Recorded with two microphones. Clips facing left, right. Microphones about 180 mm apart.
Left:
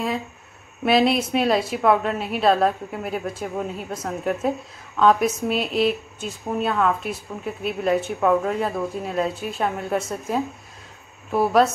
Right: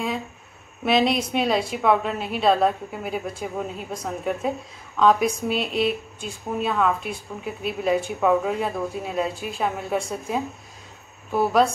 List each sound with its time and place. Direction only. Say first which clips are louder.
0.8 s a woman's voice: left 2 dB; 5° left (ahead or behind)